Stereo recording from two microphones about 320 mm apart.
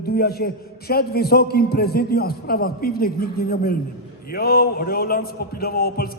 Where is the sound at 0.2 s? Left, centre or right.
Left.